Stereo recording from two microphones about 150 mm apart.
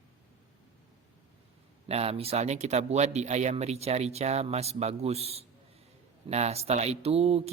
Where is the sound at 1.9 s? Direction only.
40° right (ahead or behind).